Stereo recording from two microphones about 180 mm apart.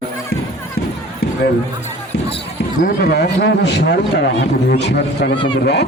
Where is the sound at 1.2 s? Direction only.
60° left (ahead or behind).